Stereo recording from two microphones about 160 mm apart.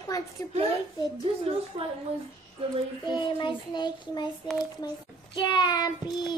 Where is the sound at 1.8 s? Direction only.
35° right (ahead or behind).